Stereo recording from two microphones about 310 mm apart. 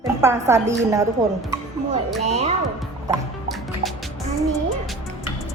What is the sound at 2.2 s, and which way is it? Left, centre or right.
Speech, right.